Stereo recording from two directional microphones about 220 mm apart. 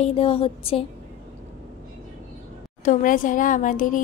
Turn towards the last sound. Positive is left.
turn(degrees=35)  # may be behind; listen again after turning